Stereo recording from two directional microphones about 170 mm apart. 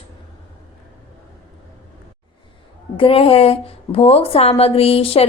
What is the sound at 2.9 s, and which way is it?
A woman's voice, 35° left (ahead or behind).